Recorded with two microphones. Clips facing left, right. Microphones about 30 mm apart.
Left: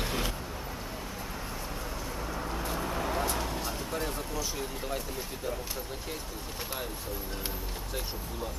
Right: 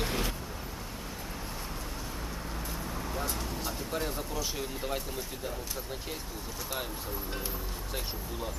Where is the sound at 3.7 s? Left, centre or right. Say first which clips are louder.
Left 1 dB; centre.